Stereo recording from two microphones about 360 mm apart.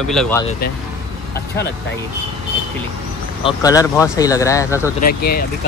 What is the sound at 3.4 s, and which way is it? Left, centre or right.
Speech, centre.